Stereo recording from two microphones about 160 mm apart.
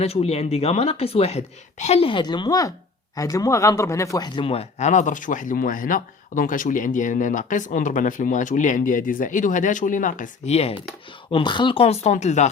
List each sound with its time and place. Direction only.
0.0 s speech: 40° left (ahead or behind); by 4.3 s 20° left (ahead or behind)
4.4 s speech: 40° left (ahead or behind)
11.3 s speech: 30° left (ahead or behind); by 12.5 s 45° left (ahead or behind)